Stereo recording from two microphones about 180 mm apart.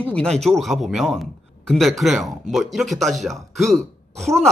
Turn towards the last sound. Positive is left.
turn(degrees=0)  # may be behind; listen again after turning